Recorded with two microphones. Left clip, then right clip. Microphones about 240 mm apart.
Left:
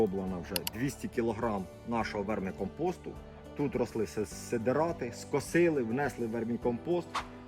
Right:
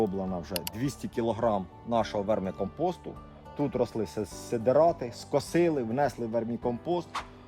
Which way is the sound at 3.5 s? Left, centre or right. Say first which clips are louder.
Right 3 dB; right.